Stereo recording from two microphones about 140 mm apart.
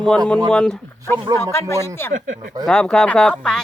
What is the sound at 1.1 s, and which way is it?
Speech, 30° right (ahead or behind).